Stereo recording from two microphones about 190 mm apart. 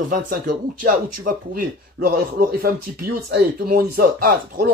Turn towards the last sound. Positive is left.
turn(degrees=-50)  # may be behind; listen again after turning